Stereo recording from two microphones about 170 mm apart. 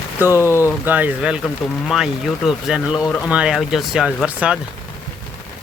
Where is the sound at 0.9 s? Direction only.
10° right (ahead or behind).